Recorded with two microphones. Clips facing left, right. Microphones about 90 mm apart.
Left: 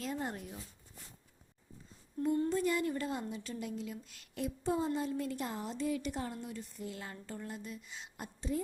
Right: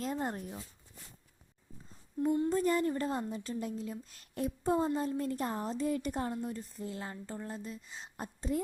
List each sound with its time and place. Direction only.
0.0 s speech: 40° right (ahead or behind)
2.5 s speech: 40° right (ahead or behind)